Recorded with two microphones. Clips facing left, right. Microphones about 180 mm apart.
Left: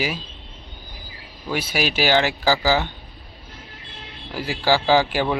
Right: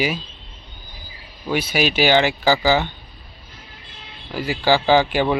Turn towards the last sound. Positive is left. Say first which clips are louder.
# right 2 dB
turn(degrees=5)  # may be behind; listen again after turning